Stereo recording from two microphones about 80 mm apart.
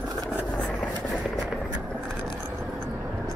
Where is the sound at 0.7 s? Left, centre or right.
Centre.